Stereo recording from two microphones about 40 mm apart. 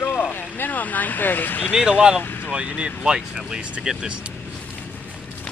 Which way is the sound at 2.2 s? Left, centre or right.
Left.